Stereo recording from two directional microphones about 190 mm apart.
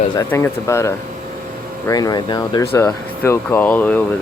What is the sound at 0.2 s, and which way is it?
Speech, 15° left (ahead or behind).